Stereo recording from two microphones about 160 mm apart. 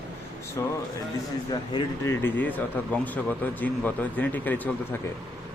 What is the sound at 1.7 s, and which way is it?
Speech, 30° left (ahead or behind).